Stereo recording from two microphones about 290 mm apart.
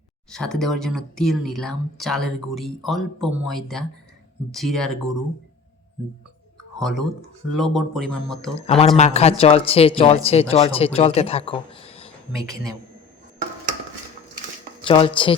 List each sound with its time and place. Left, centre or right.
0.3 s speech: centre
6.7 s speech: centre
8.6 s speech: left
14.8 s speech: centre